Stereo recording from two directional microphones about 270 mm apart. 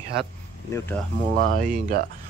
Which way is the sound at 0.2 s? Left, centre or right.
Centre.